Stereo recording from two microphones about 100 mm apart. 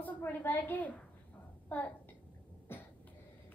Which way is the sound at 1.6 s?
15° left (ahead or behind).